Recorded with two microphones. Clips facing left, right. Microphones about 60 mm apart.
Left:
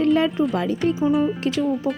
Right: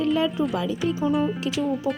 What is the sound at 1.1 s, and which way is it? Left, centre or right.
Speech, centre.